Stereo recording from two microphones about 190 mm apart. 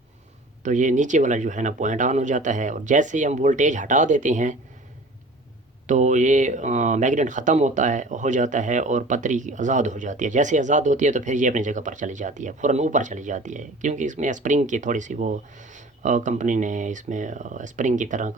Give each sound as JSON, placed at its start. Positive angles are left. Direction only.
{"t": 0.6, "sound": "speech", "side_deg": -40}
{"t": 5.9, "sound": "speech", "side_deg": -40}